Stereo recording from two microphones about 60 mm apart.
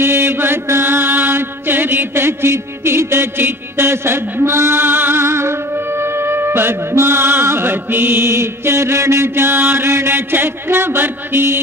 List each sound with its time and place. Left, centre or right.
0.0 s mantra: right